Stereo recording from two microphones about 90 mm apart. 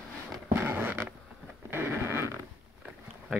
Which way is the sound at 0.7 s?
20° right (ahead or behind).